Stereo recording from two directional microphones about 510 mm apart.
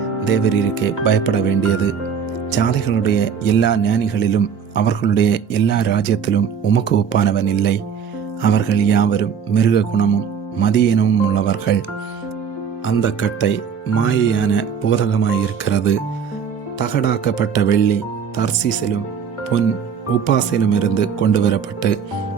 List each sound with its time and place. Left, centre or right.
0.3 s speech: left
2.6 s speech: centre
12.8 s speech: left
19.5 s speech: left